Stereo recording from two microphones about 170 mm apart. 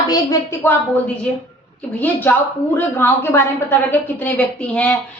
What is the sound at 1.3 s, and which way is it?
Speech, 5° left (ahead or behind).